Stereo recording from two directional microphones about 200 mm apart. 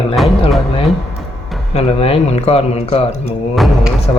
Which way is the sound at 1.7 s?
30° left (ahead or behind).